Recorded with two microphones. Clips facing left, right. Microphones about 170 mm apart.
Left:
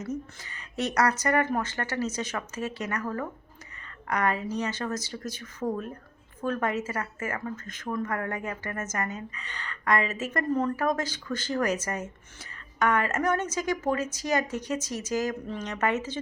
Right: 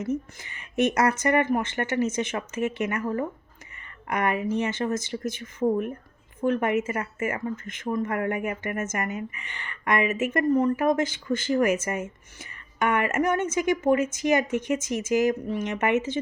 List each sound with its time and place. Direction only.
0.0 s a woman's voice: 25° right (ahead or behind)